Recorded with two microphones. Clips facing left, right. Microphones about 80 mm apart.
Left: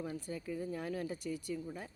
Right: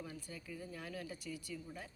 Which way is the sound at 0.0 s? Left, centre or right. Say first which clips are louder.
Left 8 dB; left.